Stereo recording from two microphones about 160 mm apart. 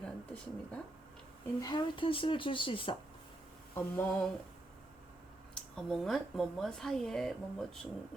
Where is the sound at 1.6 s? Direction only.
30° left (ahead or behind).